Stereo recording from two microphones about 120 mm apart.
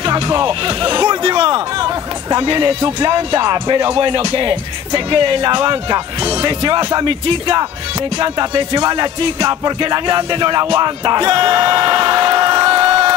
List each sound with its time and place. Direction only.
0.0 s music: 35° right (ahead or behind)
2.3 s speech: 40° right (ahead or behind)